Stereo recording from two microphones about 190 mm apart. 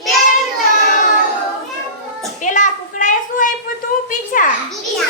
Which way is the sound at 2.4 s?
40° left (ahead or behind).